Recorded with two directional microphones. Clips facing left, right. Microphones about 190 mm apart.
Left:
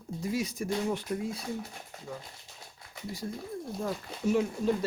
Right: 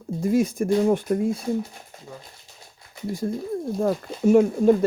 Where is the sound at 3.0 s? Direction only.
50° right (ahead or behind).